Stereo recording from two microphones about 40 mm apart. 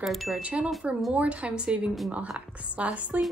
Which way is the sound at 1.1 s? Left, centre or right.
Right.